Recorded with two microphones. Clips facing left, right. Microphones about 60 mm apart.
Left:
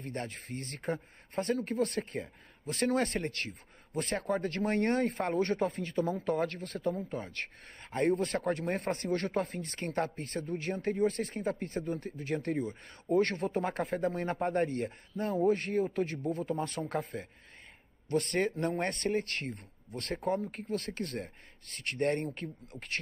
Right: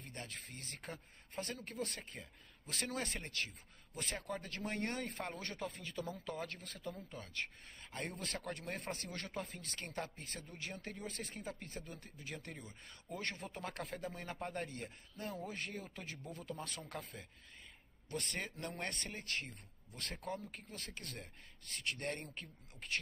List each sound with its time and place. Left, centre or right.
0.0 s speech: left
7.0 s speech: left
7.3 s speech: left
16.8 s speech: left